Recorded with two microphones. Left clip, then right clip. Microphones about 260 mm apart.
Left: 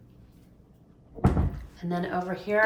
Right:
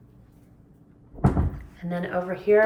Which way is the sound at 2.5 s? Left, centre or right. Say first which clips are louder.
Right 7 dB; left.